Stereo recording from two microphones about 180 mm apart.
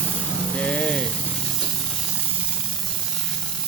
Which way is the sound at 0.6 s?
5° left (ahead or behind).